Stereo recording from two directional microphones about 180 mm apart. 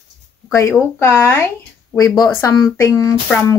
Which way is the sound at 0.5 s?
15° left (ahead or behind).